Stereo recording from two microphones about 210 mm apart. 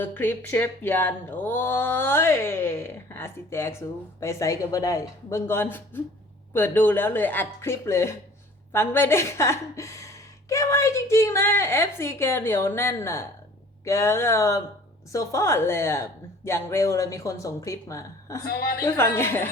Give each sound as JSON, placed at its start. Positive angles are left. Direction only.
{"t": 0.0, "sound": "speech", "side_deg": 10}
{"t": 18.4, "sound": "a woman's voice", "side_deg": 45}
{"t": 18.8, "sound": "speech", "side_deg": 10}